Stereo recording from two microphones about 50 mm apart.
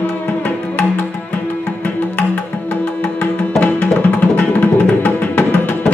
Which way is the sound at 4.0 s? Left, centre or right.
Left.